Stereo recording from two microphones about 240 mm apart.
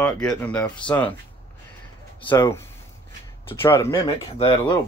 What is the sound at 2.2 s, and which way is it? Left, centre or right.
Speech, centre.